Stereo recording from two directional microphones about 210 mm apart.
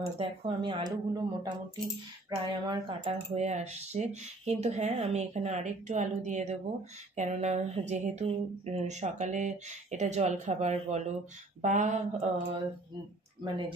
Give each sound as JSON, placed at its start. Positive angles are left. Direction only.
{"t": 0.2, "sound": "speech", "side_deg": -25}
{"t": 3.1, "sound": "speech", "side_deg": -30}
{"t": 13.4, "sound": "speech", "side_deg": -20}